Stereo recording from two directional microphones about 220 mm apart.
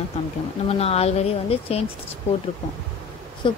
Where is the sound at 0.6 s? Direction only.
25° left (ahead or behind).